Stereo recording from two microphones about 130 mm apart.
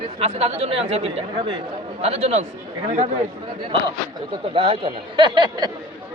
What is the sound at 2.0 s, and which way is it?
Speech, 50° right (ahead or behind).